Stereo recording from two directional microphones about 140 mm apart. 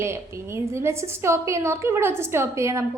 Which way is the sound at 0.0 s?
20° right (ahead or behind).